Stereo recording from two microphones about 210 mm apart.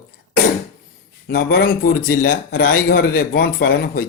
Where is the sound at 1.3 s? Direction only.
45° left (ahead or behind).